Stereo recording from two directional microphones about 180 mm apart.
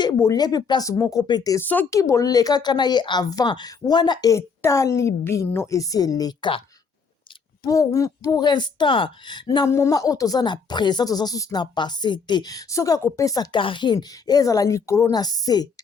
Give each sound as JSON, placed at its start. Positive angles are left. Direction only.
{"t": 0.0, "sound": "speech", "side_deg": 20}
{"t": 7.6, "sound": "speech", "side_deg": 20}